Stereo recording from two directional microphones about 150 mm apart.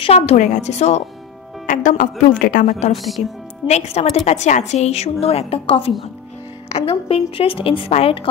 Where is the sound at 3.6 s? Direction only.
45° left (ahead or behind).